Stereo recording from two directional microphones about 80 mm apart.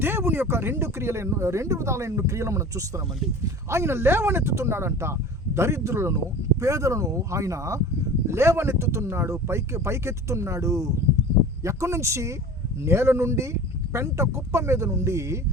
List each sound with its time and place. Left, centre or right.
0.0 s speech: right